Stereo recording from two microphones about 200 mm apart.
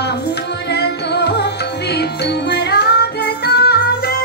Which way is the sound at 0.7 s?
55° left (ahead or behind).